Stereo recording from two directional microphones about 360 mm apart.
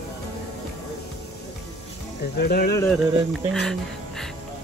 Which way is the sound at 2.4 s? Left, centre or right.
Left.